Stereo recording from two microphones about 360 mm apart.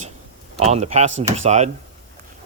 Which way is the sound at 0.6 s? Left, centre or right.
Centre.